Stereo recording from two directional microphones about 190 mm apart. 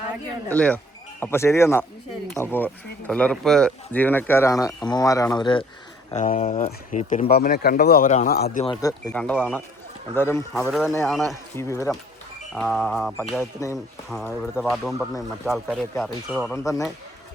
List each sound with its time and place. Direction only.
0.5 s speech: 5° left (ahead or behind); by 5.6 s 25° left (ahead or behind)
6.1 s speech: 35° left (ahead or behind)
7.3 s a man's voice: 55° left (ahead or behind)
8.8 s speech: 20° left (ahead or behind)
9.4 s speech: 10° left (ahead or behind)
10.7 s speech: centre (ahead or behind)
11.5 s speech: 15° left (ahead or behind)
12.5 s speech: 5° left (ahead or behind)
13.4 s speech: 15° left (ahead or behind)
14.1 s speech: 5° right (ahead or behind)
16.6 s speech: 15° left (ahead or behind)